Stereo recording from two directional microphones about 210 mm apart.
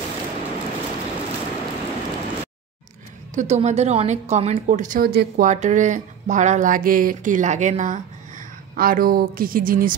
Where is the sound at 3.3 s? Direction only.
35° right (ahead or behind).